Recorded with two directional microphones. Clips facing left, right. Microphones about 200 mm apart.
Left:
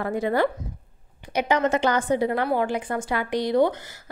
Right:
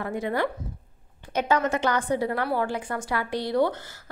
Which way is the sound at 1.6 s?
25° left (ahead or behind).